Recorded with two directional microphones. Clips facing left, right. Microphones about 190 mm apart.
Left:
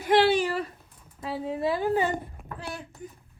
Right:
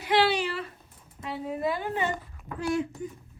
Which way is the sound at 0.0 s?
50° left (ahead or behind).